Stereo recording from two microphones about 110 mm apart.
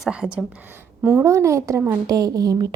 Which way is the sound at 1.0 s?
25° right (ahead or behind).